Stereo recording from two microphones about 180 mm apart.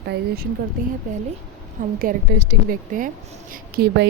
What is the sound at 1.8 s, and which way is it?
Speech, 50° right (ahead or behind).